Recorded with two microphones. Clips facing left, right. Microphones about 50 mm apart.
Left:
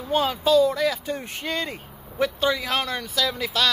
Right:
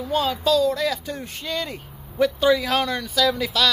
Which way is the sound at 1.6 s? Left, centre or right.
Centre.